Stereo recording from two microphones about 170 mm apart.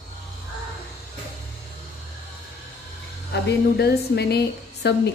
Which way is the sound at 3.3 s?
75° left (ahead or behind).